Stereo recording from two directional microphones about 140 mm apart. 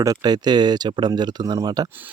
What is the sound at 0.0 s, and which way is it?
Speech, 25° right (ahead or behind).